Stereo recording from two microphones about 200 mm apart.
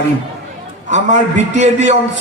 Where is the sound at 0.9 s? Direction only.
35° right (ahead or behind).